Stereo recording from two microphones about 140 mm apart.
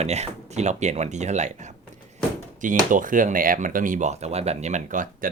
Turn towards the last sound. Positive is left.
turn(degrees=-70)  # may be behind; listen again after turning